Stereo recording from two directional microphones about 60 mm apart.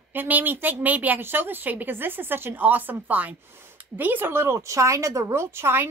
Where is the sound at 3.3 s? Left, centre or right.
Right.